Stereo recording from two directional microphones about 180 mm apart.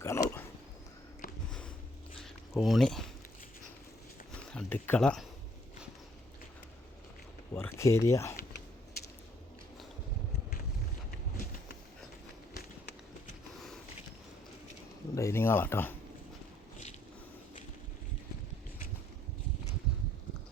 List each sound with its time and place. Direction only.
0.0 s a sound: 15° left (ahead or behind)
1.5 s biting: 5° left (ahead or behind)
2.6 s speech: centre (ahead or behind)
4.4 s speech: 5° left (ahead or behind)
7.5 s speech: 15° left (ahead or behind)
15.1 s speech: 15° left (ahead or behind)